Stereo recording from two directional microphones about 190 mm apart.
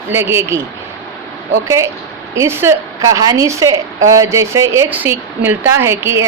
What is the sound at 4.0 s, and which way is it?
Speech, 90° right.